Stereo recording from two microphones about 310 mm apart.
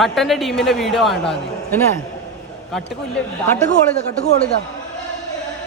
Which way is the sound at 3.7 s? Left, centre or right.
Left.